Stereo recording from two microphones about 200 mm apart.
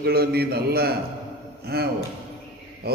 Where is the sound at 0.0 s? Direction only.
50° right (ahead or behind).